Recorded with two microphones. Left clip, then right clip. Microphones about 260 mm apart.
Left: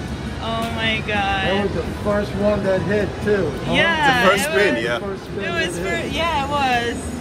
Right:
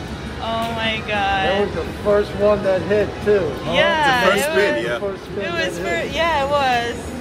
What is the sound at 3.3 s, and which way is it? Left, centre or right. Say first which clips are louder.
Speech: right 3 dB; right.